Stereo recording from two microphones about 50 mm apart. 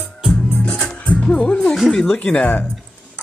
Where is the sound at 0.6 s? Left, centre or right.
Centre.